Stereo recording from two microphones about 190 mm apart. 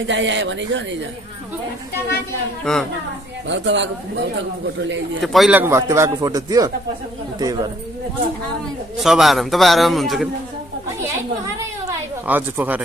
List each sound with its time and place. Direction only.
0.0 s speech: 75° right (ahead or behind)
2.6 s a man's voice: centre (ahead or behind)
3.4 s speech: 70° right (ahead or behind)
5.2 s a woman's voice: centre (ahead or behind); by 7.7 s 20° right (ahead or behind)
8.9 s a man's voice: centre (ahead or behind)
11.9 s a sound: 10° right (ahead or behind)